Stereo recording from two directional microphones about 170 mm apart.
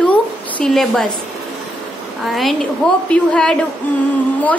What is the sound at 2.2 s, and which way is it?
A woman's voice, centre (ahead or behind).